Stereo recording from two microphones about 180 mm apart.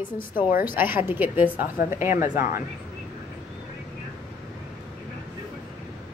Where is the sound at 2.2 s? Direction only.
45° left (ahead or behind).